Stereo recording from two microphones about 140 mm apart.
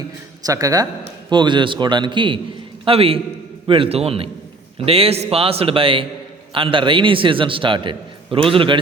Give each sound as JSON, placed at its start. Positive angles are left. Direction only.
{"t": 0.4, "sound": "a man's voice", "side_deg": -25}